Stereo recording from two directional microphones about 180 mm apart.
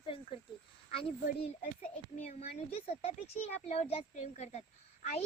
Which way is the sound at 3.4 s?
35° left (ahead or behind).